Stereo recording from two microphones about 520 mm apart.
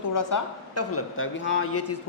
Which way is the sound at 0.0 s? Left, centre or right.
Left.